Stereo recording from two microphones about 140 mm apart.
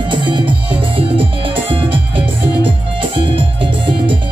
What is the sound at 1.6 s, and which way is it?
Music, 40° right (ahead or behind).